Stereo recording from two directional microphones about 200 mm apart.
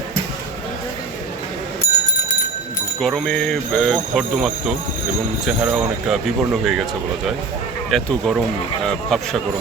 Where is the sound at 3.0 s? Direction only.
5° left (ahead or behind).